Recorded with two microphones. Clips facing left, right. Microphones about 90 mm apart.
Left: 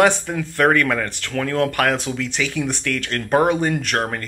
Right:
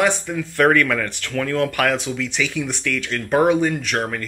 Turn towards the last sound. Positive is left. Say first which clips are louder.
# even
turn(degrees=50)  # may be behind; listen again after turning